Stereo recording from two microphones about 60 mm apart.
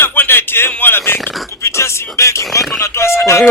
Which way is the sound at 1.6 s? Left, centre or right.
Left.